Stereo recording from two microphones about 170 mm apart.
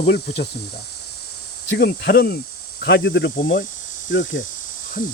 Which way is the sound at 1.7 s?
70° left (ahead or behind).